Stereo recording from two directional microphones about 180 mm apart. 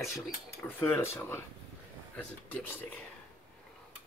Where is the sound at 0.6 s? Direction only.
10° left (ahead or behind).